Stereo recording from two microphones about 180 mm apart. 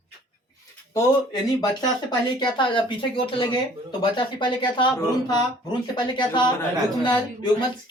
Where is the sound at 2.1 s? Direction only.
25° left (ahead or behind).